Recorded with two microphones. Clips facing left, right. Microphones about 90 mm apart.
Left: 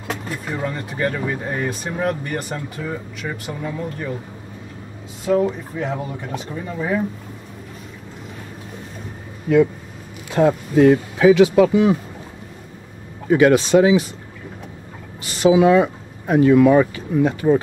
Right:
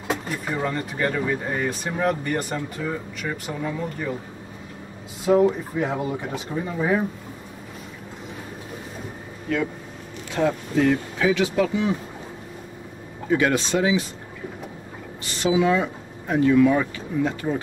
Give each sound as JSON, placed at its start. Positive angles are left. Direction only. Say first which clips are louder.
{"t": 0.1, "sound": "speech", "louder": "even", "side_deg": 0}
{"t": 5.2, "sound": "speech", "louder": "right 1 dB", "side_deg": -10}
{"t": 10.3, "sound": "speech", "louder": "left 6 dB", "side_deg": 45}
{"t": 13.4, "sound": "speech", "louder": "left 10 dB", "side_deg": 80}
{"t": 15.4, "sound": "speech", "louder": "left 7 dB", "side_deg": 60}